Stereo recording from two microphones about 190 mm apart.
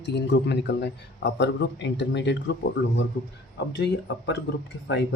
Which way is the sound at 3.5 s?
65° left (ahead or behind).